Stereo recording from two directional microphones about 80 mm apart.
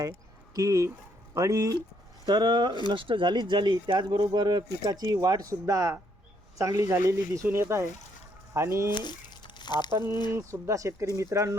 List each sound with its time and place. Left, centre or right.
0.5 s speech: right
2.2 s speech: right
2.9 s speech: right
8.9 s crumpling: left
10.2 s speech: right